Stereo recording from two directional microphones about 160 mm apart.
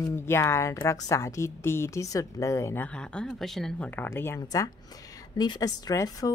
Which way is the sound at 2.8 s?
5° left (ahead or behind).